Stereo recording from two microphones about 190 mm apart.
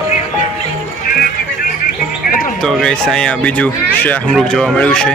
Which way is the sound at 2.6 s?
Centre (ahead or behind).